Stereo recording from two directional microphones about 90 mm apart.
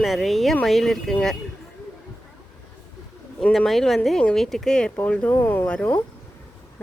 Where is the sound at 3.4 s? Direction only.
5° left (ahead or behind); by 5.7 s 25° left (ahead or behind).